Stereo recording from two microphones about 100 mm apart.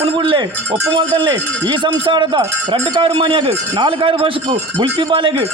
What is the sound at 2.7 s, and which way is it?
A man's voice, 60° right (ahead or behind).